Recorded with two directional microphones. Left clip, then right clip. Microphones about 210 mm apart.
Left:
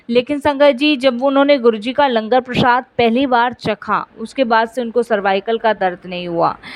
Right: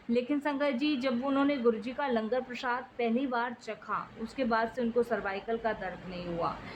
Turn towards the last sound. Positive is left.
turn(degrees=40)  # may be behind; listen again after turning